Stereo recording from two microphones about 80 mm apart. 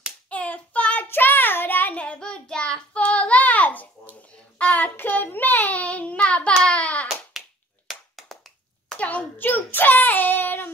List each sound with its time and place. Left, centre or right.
0.3 s hands: centre
1.0 s child singing: left
7.3 s a sound: centre
8.9 s child singing: centre